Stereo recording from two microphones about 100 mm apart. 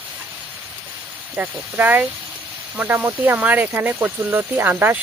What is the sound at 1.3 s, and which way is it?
Speech, 20° right (ahead or behind).